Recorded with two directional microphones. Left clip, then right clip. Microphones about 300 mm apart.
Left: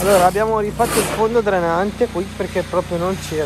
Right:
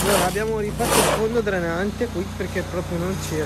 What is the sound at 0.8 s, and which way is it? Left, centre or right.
Speech, centre.